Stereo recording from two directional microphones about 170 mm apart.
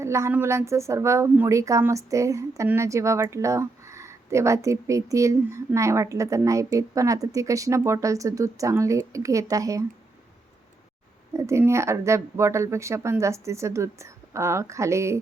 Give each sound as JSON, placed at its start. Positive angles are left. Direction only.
{"t": 0.0, "sound": "speech", "side_deg": -15}
{"t": 11.3, "sound": "speech", "side_deg": -15}